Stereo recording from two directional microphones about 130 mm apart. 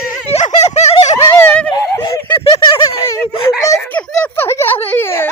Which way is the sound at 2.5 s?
40° left (ahead or behind).